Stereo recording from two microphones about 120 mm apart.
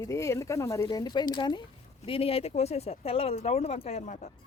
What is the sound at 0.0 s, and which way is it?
Speech, 25° left (ahead or behind).